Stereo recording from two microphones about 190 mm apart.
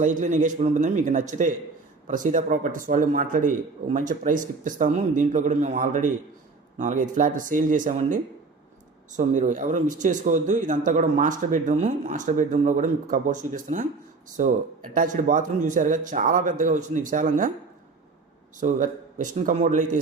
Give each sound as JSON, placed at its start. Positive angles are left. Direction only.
{"t": 0.0, "sound": "a man's voice", "side_deg": -40}
{"t": 14.9, "sound": "a man's voice", "side_deg": -45}
{"t": 18.6, "sound": "speech", "side_deg": -40}